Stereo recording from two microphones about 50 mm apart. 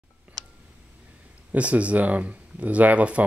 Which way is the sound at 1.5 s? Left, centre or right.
Right.